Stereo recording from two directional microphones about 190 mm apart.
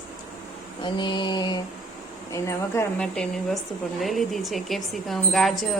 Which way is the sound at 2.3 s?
15° left (ahead or behind).